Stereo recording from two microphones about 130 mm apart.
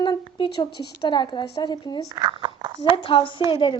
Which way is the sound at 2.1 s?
35° right (ahead or behind).